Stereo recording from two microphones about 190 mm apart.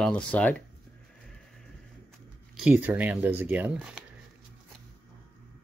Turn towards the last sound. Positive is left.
turn(degrees=-10)  # may be behind; listen again after turning